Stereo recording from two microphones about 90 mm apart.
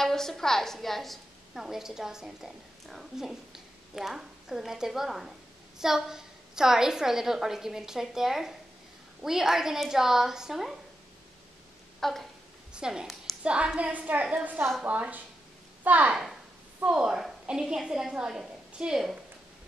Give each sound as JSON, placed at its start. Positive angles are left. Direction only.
{"t": 0.0, "sound": "a woman's voice", "side_deg": 5}
{"t": 12.0, "sound": "a sound", "side_deg": 5}
{"t": 12.7, "sound": "a woman's voice", "side_deg": -10}